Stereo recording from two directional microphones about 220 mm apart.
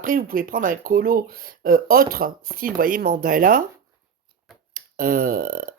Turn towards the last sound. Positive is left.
turn(degrees=-40)  # may be behind; listen again after turning